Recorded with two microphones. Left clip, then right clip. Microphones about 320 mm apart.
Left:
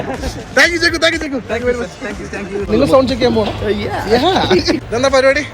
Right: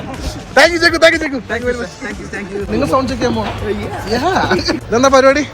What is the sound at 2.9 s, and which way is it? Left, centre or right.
Speech, left.